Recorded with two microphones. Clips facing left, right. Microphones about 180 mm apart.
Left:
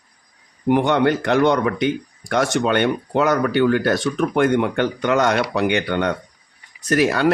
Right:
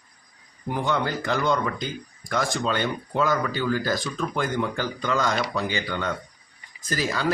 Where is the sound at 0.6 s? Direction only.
70° left (ahead or behind).